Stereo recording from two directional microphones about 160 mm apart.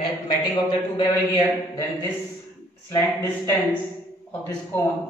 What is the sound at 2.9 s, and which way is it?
A man's voice, 20° left (ahead or behind).